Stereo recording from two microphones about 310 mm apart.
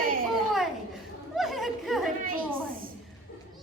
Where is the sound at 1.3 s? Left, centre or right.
Centre.